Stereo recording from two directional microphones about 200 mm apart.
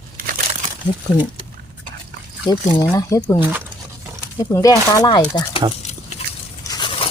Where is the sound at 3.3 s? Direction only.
10° right (ahead or behind).